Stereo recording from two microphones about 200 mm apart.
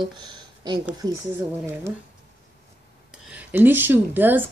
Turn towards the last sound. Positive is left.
turn(degrees=-10)  # may be behind; listen again after turning